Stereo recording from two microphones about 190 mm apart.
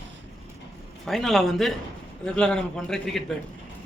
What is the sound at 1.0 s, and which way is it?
A man's voice, centre (ahead or behind).